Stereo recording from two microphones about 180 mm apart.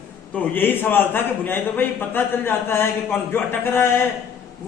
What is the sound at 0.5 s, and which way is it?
A man's voice, 10° left (ahead or behind).